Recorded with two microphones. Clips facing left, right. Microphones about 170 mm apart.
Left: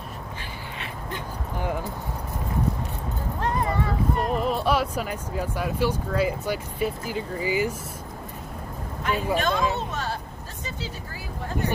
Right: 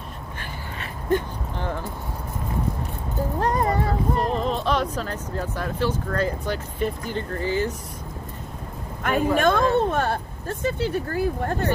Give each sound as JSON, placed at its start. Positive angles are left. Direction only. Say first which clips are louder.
{"t": 3.3, "sound": "speech", "louder": "right 3 dB", "side_deg": -40}
{"t": 4.3, "sound": "speech", "louder": "even", "side_deg": 10}
{"t": 9.0, "sound": "speech", "louder": "right 5 dB", "side_deg": -50}